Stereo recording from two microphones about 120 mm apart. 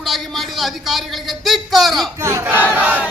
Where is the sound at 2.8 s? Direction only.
15° right (ahead or behind).